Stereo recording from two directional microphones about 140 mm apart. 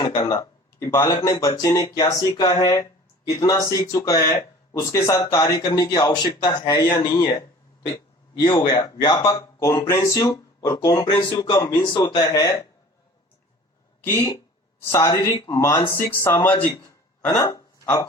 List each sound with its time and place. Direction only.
0.0 s speech: 30° left (ahead or behind)
6.9 s speech: 20° left (ahead or behind)
14.2 s speech: 25° left (ahead or behind)
16.7 s a sound: 25° left (ahead or behind)